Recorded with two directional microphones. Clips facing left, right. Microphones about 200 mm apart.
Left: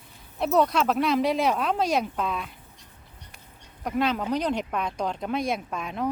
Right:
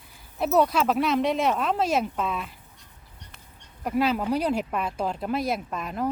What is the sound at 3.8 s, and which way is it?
Speech, 5° right (ahead or behind).